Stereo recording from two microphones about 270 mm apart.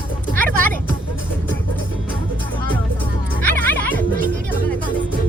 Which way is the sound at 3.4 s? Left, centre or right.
Centre.